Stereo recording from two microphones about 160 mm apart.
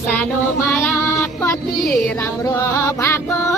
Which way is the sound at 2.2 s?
20° left (ahead or behind).